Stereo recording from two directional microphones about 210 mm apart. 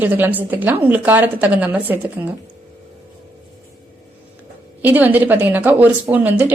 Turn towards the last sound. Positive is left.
turn(degrees=-5)  # may be behind; listen again after turning